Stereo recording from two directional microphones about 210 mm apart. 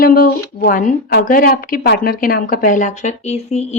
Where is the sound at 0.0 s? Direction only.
45° left (ahead or behind).